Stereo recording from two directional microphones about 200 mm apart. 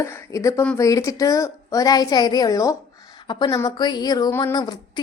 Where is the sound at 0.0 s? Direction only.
15° left (ahead or behind).